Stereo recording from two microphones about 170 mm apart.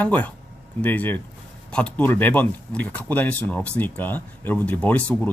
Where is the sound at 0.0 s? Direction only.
10° left (ahead or behind).